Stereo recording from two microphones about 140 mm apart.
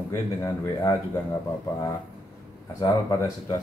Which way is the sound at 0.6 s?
25° left (ahead or behind).